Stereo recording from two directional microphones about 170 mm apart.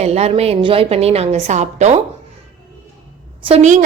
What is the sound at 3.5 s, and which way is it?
Speech, 40° right (ahead or behind).